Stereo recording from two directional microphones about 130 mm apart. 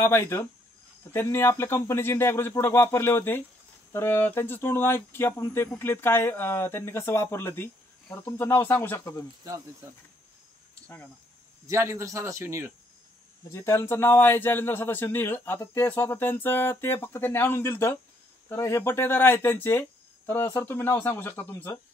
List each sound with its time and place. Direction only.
0.0 s a man's voice: 20° left (ahead or behind)
9.4 s speech: 25° right (ahead or behind)
10.7 s a sound: 10° left (ahead or behind)
11.6 s speech: 20° right (ahead or behind)
13.5 s a man's voice: 20° left (ahead or behind)